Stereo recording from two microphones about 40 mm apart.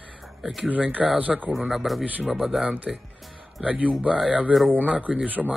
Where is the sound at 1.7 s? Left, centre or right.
Centre.